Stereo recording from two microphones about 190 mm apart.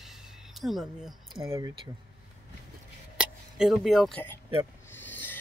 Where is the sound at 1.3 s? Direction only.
15° right (ahead or behind).